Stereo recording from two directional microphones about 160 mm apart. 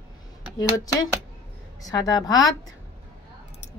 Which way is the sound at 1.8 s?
25° left (ahead or behind).